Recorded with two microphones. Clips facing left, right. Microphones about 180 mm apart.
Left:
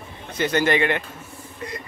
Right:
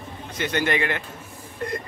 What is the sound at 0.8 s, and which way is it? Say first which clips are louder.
Speech: left 4 dB; 20° left (ahead or behind).